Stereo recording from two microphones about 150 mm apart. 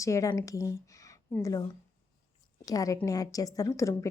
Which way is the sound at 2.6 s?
25° left (ahead or behind).